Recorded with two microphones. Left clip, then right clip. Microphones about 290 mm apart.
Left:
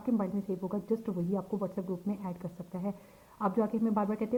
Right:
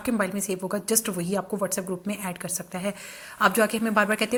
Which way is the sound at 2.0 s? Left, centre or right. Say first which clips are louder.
Right 7 dB; right.